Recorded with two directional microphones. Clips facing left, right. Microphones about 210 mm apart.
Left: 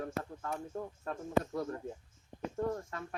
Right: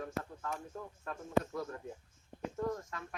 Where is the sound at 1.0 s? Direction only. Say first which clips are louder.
Even; 30° left (ahead or behind).